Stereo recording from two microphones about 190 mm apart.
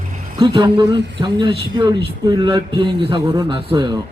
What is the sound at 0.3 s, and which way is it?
A man's voice, 25° right (ahead or behind).